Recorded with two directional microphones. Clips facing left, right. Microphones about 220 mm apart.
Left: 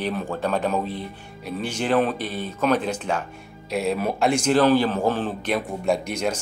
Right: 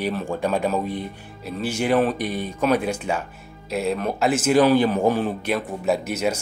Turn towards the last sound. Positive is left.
turn(degrees=-5)  # may be behind; listen again after turning